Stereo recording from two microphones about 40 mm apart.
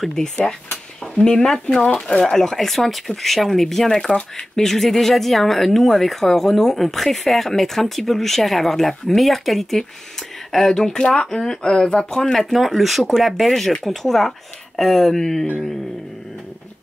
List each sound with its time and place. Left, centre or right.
1.2 s speech: centre
2.3 s speech: centre
12.1 s speech: centre